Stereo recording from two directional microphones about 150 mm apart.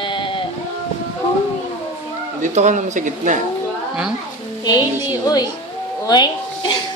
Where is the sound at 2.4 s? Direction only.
55° right (ahead or behind).